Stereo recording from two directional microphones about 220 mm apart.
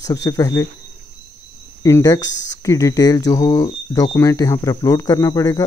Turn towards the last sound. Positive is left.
turn(degrees=15)  # may be behind; listen again after turning